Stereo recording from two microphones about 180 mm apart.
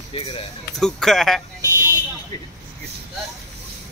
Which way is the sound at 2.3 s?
20° left (ahead or behind).